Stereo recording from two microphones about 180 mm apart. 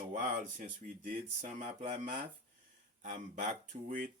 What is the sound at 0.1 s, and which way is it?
Speech, 45° right (ahead or behind).